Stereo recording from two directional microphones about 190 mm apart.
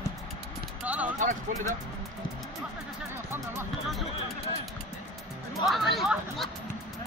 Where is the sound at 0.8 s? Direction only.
10° right (ahead or behind).